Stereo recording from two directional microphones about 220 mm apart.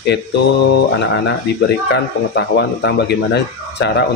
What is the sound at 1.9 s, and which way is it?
Speech, 50° left (ahead or behind).